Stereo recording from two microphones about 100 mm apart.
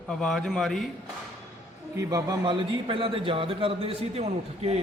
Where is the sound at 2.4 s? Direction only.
55° right (ahead or behind); by 4.8 s 90° right.